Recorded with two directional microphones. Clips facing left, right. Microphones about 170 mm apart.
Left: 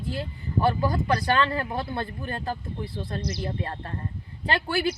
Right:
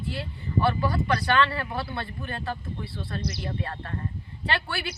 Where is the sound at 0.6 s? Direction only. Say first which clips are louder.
Left 2 dB; 40° left (ahead or behind).